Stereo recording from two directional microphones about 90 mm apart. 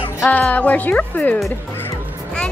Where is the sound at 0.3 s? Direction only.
15° left (ahead or behind).